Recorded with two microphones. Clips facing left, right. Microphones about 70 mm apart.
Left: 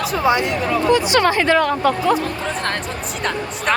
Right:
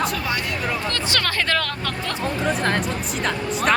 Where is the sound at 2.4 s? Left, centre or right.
Centre.